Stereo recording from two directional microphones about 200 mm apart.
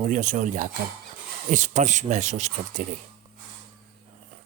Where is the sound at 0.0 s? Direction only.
40° right (ahead or behind).